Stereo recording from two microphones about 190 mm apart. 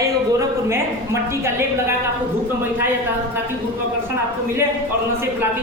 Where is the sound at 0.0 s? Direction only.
15° right (ahead or behind).